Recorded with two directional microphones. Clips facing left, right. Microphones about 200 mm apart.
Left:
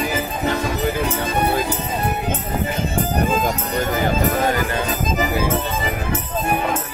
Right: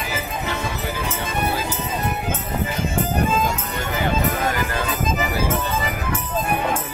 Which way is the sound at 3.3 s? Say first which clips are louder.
Left 2 dB; 40° left (ahead or behind).